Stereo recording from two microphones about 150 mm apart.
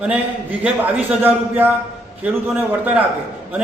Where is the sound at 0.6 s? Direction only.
10° right (ahead or behind).